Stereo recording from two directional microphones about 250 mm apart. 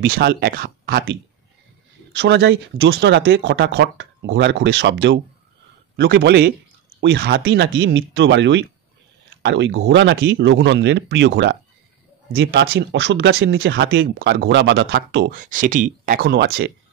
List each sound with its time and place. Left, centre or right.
0.1 s speech: right
2.1 s speech: right